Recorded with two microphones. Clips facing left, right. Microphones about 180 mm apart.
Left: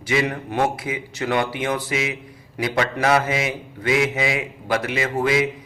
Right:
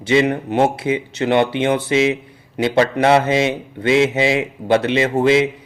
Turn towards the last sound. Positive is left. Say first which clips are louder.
# right 6 dB
turn(degrees=-25)  # may be behind; listen again after turning